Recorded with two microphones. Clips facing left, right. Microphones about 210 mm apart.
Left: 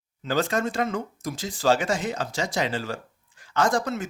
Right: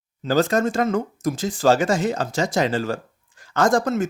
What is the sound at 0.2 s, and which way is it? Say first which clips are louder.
Speech: right 6 dB; 40° right (ahead or behind).